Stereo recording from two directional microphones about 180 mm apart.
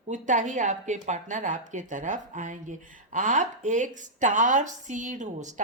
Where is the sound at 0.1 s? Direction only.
45° right (ahead or behind).